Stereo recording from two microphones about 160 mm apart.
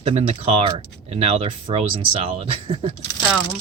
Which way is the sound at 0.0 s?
35° right (ahead or behind).